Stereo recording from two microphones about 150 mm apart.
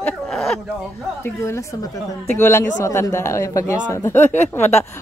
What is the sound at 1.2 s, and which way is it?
A woman's voice, 20° left (ahead or behind).